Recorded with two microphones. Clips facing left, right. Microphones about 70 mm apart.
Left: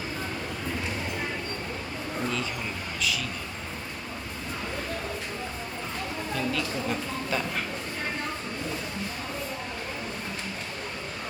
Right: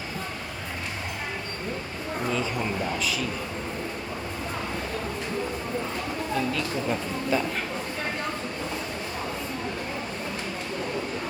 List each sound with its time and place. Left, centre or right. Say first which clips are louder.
6.5 s speech: right 2 dB; centre